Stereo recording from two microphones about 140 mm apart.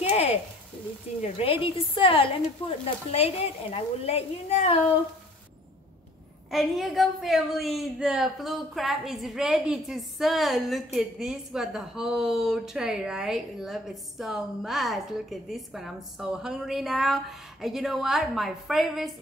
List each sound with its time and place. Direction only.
0.1 s a sound: 45° left (ahead or behind)
1.2 s a woman's voice: 45° left (ahead or behind)
6.5 s a woman's voice: centre (ahead or behind)